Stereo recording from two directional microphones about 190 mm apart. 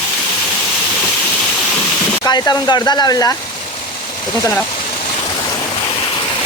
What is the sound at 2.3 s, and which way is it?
Speech, 20° left (ahead or behind).